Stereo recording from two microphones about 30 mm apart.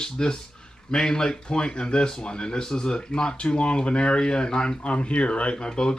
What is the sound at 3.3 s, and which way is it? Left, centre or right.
Speech, left.